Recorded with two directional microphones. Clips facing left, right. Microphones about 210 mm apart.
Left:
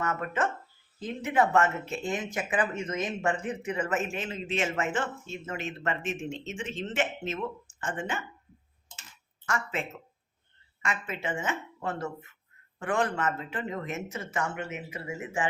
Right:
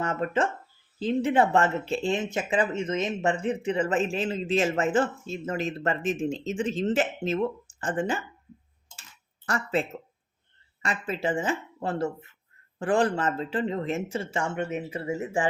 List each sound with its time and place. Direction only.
0.0 s speech: 30° right (ahead or behind)
9.5 s speech: 35° right (ahead or behind)
10.8 s speech: 35° right (ahead or behind)